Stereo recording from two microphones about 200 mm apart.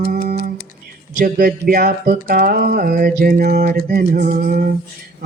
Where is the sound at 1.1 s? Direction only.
45° right (ahead or behind).